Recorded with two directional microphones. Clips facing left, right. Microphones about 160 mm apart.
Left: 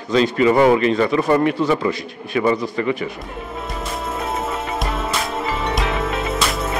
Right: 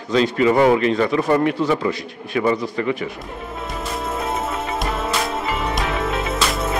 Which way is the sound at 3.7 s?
Centre (ahead or behind).